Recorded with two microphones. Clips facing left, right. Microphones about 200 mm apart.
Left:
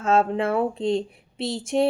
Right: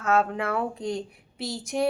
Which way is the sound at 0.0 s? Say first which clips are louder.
Left 4 dB; 25° left (ahead or behind).